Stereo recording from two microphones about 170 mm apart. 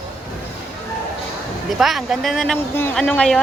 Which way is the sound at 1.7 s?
Centre (ahead or behind).